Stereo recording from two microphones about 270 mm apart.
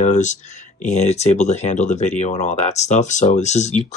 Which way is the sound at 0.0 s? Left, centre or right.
Left.